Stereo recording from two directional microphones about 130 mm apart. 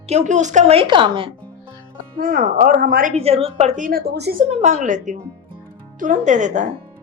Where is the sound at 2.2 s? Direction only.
90° right.